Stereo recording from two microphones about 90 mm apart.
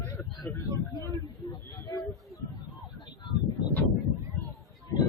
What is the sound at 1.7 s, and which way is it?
Speech, 40° left (ahead or behind).